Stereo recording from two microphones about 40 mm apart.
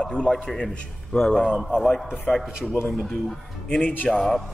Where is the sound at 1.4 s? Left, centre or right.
Centre.